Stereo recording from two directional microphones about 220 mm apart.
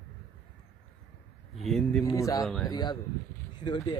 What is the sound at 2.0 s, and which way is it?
Speech, 15° left (ahead or behind).